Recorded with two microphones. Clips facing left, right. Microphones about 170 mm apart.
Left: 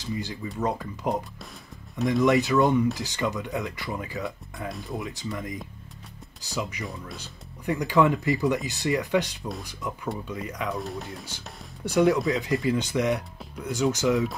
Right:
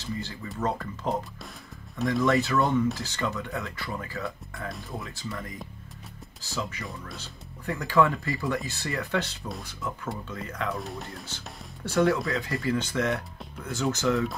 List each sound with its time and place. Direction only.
0.0 s speech: 15° left (ahead or behind)
2.2 s speech: 15° left (ahead or behind)
4.6 s speech: centre (ahead or behind)
4.9 s speech: 20° left (ahead or behind)
10.7 s speech: centre (ahead or behind)
11.2 s speech: 15° left (ahead or behind)